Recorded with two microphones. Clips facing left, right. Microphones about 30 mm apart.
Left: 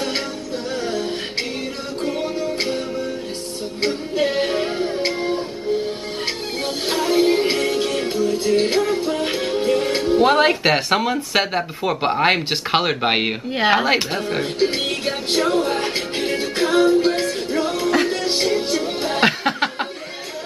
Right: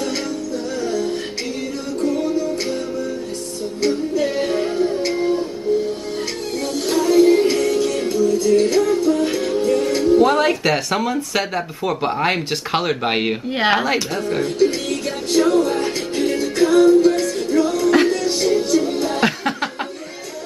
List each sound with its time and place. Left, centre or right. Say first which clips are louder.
0.8 s music: right 2 dB; left
6.9 s music: right 4 dB; left
12.4 s speech: left 1 dB; centre
13.5 s speech: left 1 dB; centre
13.8 s a woman's voice: left 1 dB; left
14.3 s music: right 4 dB; left